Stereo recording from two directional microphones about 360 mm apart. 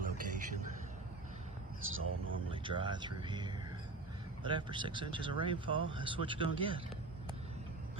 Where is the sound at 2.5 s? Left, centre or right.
Centre.